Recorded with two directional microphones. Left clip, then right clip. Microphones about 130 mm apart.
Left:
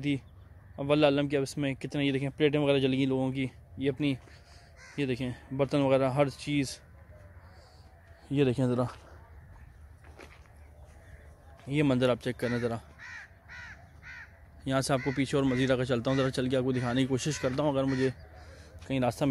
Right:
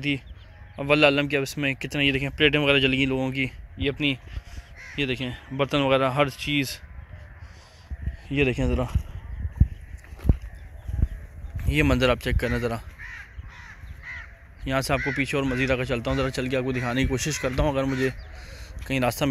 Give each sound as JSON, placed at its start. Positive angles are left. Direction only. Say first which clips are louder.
{"t": 0.7, "sound": "speech", "louder": "right 6 dB", "side_deg": 10}
{"t": 8.3, "sound": "speech", "louder": "right 4 dB", "side_deg": 20}
{"t": 11.5, "sound": "a man's voice", "louder": "right 5 dB", "side_deg": 0}
{"t": 14.6, "sound": "speech", "louder": "right 4 dB", "side_deg": 15}
{"t": 15.1, "sound": "speech", "louder": "right 4 dB", "side_deg": 30}
{"t": 18.5, "sound": "a sound", "louder": "right 6 dB", "side_deg": 0}